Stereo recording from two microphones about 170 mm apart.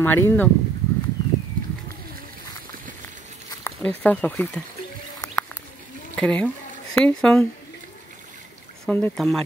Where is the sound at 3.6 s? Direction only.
10° left (ahead or behind).